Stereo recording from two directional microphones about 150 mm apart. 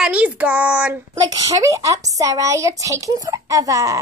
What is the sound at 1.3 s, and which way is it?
A child's voice, 20° right (ahead or behind).